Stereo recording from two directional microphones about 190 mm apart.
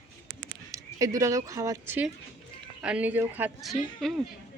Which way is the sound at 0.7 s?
15° right (ahead or behind).